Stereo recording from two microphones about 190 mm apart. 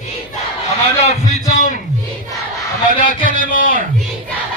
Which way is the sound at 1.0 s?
35° left (ahead or behind).